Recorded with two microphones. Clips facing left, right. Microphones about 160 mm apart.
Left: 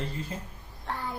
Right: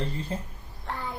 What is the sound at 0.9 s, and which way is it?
Child singing, centre (ahead or behind).